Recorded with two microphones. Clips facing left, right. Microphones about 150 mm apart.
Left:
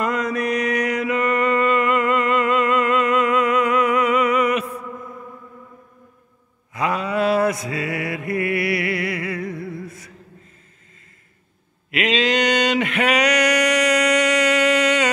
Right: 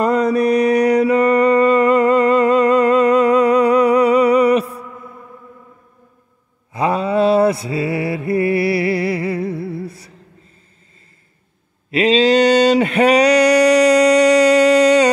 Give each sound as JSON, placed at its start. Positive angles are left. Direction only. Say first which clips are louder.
{"t": 0.0, "sound": "mantra", "louder": "right 7 dB", "side_deg": -35}
{"t": 6.7, "sound": "mantra", "louder": "right 5 dB", "side_deg": -30}
{"t": 11.9, "sound": "mantra", "louder": "right 7 dB", "side_deg": -35}